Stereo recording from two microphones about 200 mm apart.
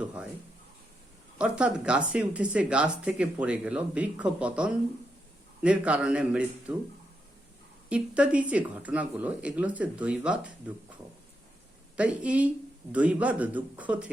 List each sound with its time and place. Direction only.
0.0 s speech: 5° right (ahead or behind)
1.4 s speech: 5° right (ahead or behind)
7.9 s speech: 5° right (ahead or behind)
11.9 s speech: 5° right (ahead or behind)